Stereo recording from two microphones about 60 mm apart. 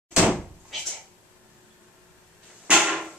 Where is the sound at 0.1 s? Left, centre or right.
Right.